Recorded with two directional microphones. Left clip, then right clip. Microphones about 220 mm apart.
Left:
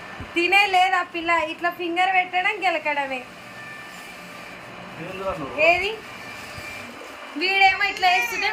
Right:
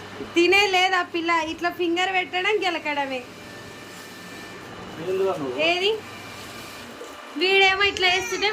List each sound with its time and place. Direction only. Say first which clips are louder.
0.3 s a woman's voice: left 1 dB; 5° right (ahead or behind)
5.5 s speech: left 5 dB; 50° right (ahead or behind)
7.3 s a woman's voice: even; 10° right (ahead or behind)